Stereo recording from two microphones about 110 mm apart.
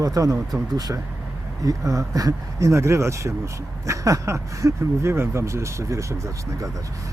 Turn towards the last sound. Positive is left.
turn(degrees=-30)  # may be behind; listen again after turning